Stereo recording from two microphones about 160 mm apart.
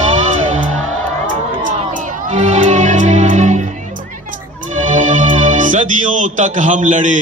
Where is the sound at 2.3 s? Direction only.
45° right (ahead or behind).